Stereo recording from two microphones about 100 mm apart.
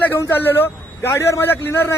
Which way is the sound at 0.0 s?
20° left (ahead or behind).